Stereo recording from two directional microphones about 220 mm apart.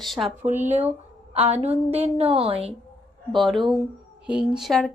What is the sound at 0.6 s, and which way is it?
Speech, 30° right (ahead or behind).